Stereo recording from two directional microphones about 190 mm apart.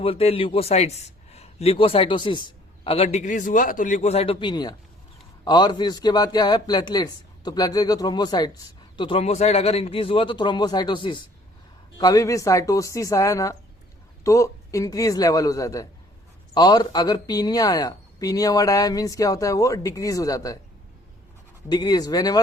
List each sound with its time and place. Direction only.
0.0 s a man's voice: 30° left (ahead or behind)
21.7 s speech: 20° left (ahead or behind)